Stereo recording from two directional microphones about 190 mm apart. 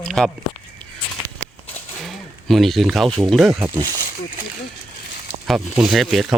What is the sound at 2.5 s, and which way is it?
Speech, centre (ahead or behind).